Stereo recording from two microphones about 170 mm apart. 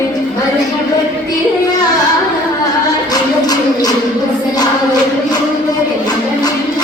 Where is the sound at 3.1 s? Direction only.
25° left (ahead or behind).